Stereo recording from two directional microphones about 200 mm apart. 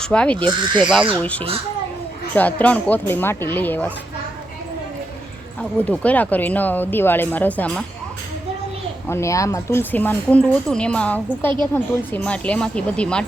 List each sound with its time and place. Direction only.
0.0 s speech: 5° left (ahead or behind)
0.4 s speech: 25° right (ahead or behind)
1.1 s speech: 5° left (ahead or behind)
5.5 s speech: 5° left (ahead or behind)
9.0 s speech: 15° left (ahead or behind)